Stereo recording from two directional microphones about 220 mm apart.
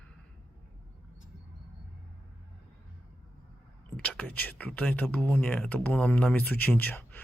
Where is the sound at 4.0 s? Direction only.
5° left (ahead or behind).